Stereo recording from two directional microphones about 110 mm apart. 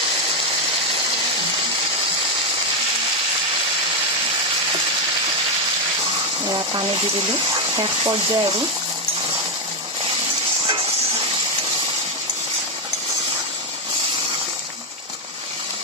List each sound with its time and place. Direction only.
6.4 s speech: 45° right (ahead or behind)